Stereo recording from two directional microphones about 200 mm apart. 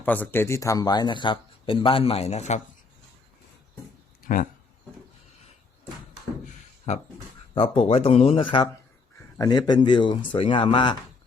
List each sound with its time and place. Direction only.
0.0 s a man's voice: 10° left (ahead or behind); by 2.6 s 35° left (ahead or behind)
4.2 s a sound: 45° left (ahead or behind)
6.9 s a man's voice: 35° left (ahead or behind)